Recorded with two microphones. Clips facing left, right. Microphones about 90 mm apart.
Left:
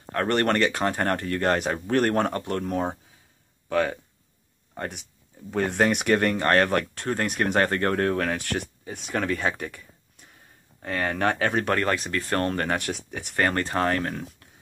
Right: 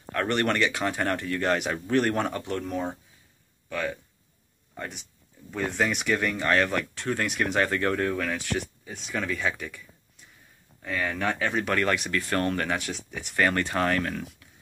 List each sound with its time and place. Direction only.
0.1 s speech: 35° left (ahead or behind)
5.5 s speech: 65° left (ahead or behind)
11.7 s speech: 35° left (ahead or behind); by 13.3 s 55° left (ahead or behind)
13.4 s speech: 35° left (ahead or behind)